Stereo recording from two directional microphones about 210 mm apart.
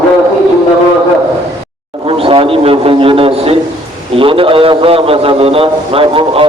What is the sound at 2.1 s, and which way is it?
A man's voice, 25° right (ahead or behind).